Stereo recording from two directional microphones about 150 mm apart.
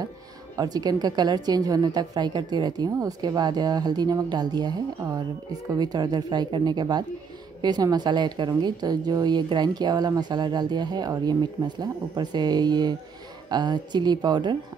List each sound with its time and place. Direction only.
0.6 s a woman's voice: 25° right (ahead or behind)